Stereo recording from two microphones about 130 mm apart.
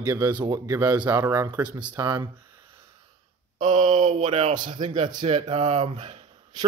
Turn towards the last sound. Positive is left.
turn(degrees=-55)  # may be behind; listen again after turning